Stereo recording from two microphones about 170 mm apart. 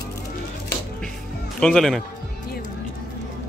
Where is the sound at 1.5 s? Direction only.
5° left (ahead or behind).